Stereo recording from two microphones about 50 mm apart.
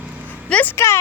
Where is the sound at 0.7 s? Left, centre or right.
Left.